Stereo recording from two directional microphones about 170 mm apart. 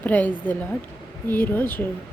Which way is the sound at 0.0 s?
10° left (ahead or behind).